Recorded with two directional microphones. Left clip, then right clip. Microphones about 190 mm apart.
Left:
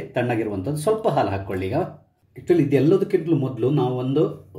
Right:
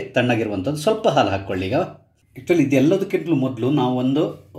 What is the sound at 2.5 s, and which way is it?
Speech, 15° right (ahead or behind).